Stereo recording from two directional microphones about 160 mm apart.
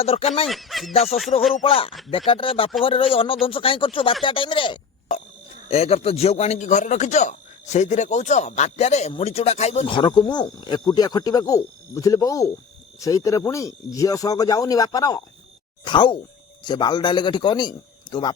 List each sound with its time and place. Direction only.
0.0 s speech: 40° left (ahead or behind)
0.4 s speech: centre (ahead or behind)
1.3 s a man's voice: 35° left (ahead or behind)
9.9 s speech: 30° left (ahead or behind)